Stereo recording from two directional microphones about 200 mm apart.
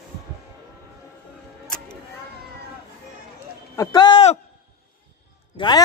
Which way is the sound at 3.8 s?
20° left (ahead or behind).